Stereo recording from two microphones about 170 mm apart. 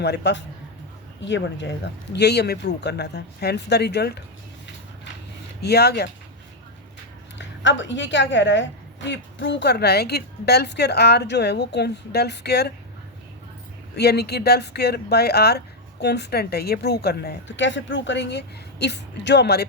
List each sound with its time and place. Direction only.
0.0 s a woman's voice: 80° left
5.6 s speech: 70° left (ahead or behind)
7.3 s a woman's voice: 90° left; by 12.7 s 70° left (ahead or behind)
13.9 s speech: 70° left (ahead or behind)